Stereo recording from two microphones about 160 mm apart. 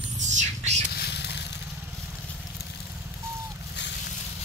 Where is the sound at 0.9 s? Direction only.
90° left.